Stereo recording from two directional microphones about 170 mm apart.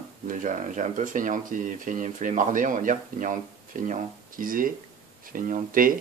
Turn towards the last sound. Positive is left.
turn(degrees=-55)  # may be behind; listen again after turning